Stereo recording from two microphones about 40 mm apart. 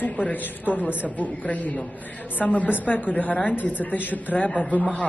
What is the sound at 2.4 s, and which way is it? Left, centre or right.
A woman's voice, left.